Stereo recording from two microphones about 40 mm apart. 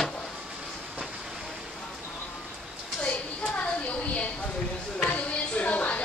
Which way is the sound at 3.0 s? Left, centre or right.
Left.